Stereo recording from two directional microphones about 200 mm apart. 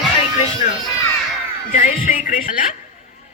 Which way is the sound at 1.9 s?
40° left (ahead or behind).